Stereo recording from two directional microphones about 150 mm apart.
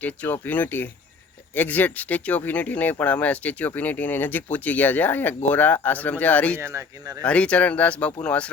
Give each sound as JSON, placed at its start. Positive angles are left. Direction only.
{"t": 0.0, "sound": "speech", "side_deg": 10}
{"t": 6.6, "sound": "speech", "side_deg": -20}
{"t": 7.2, "sound": "speech", "side_deg": 10}